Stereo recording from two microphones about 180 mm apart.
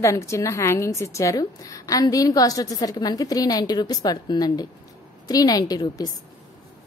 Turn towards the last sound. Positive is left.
turn(degrees=20)  # may be behind; listen again after turning